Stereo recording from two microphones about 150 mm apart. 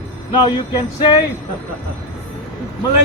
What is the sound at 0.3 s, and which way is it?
Speech, 30° left (ahead or behind).